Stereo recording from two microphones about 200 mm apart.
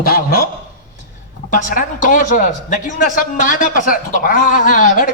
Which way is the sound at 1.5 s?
40° left (ahead or behind).